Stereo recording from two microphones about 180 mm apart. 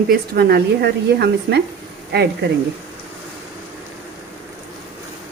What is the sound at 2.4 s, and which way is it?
Speech, 75° right (ahead or behind).